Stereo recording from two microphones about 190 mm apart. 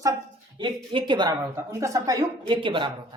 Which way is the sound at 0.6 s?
25° right (ahead or behind).